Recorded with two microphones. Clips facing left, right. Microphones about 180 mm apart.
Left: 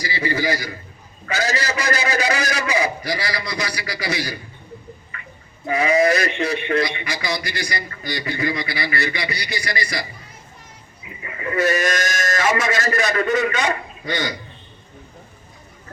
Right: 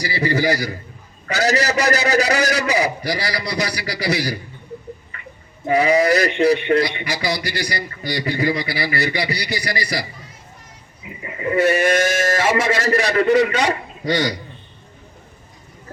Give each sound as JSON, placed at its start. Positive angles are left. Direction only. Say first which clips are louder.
{"t": 0.0, "sound": "a man's voice", "louder": "right 3 dB", "side_deg": -40}
{"t": 5.6, "sound": "a man's voice", "louder": "right 2 dB", "side_deg": -35}
{"t": 11.4, "sound": "a man's voice", "louder": "right 4 dB", "side_deg": -30}